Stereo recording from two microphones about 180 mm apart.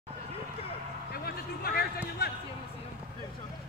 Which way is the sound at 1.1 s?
60° left (ahead or behind).